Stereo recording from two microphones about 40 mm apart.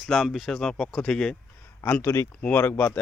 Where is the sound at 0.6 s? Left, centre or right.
Centre.